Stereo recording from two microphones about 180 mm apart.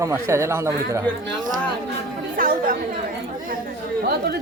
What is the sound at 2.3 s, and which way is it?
Speech, 50° right (ahead or behind).